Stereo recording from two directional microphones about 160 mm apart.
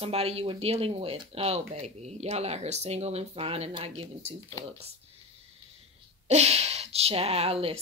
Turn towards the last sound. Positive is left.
turn(degrees=-40)  # may be behind; listen again after turning